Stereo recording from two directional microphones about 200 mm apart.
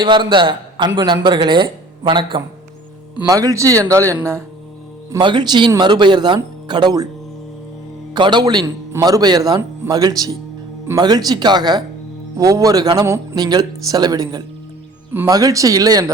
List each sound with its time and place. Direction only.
0.0 s a man's voice: 25° right (ahead or behind)
8.1 s a man's voice: 20° right (ahead or behind)